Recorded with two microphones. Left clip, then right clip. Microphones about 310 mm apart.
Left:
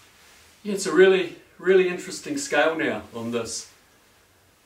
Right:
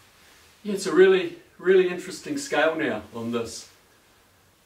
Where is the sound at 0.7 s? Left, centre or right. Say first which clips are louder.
Left 1 dB; centre.